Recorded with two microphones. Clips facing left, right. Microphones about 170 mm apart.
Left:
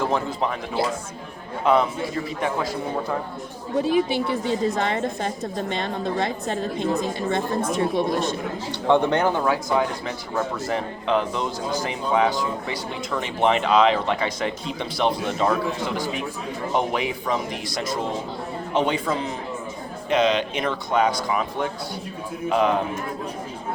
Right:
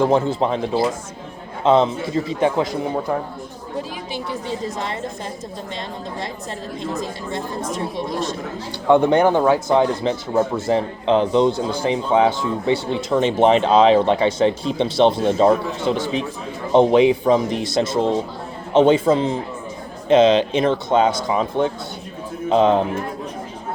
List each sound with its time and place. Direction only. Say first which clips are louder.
0.0 s a man's voice: right 7 dB; 25° right (ahead or behind)
3.8 s a woman's voice: left 8 dB; 60° left (ahead or behind)
8.9 s speech: right 5 dB; 10° right (ahead or behind)
9.4 s a man's voice: right 6 dB; 25° right (ahead or behind)